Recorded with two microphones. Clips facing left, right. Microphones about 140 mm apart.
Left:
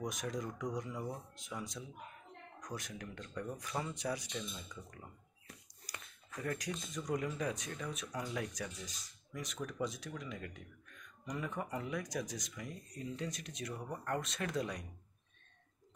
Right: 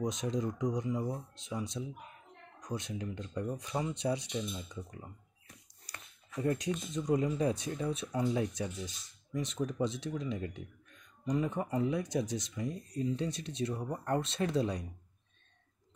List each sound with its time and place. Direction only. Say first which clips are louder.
0.0 s speech: right 6 dB; 25° right (ahead or behind)
5.9 s a sound: even; 25° right (ahead or behind)
6.3 s speech: right 8 dB; 25° right (ahead or behind)